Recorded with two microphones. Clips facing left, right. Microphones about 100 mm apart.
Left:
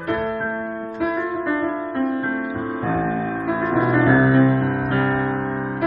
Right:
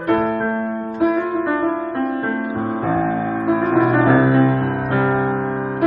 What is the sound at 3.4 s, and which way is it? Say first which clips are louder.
Music: right 5 dB; 40° right (ahead or behind).